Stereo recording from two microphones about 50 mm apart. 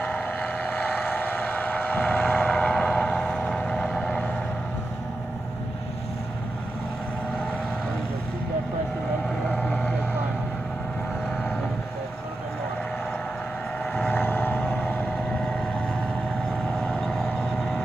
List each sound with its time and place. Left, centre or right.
0.0 s vehicle: left
9.5 s vehicle: left
14.1 s vehicle: left
16.8 s vehicle: centre